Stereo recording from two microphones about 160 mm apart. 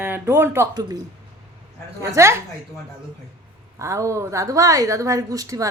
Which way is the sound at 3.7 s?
20° right (ahead or behind).